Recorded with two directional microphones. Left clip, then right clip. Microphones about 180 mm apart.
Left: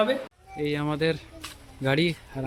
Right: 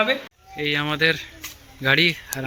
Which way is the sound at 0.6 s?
5° left (ahead or behind).